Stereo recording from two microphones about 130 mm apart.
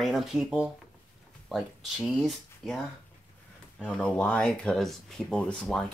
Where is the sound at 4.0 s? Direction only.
10° left (ahead or behind).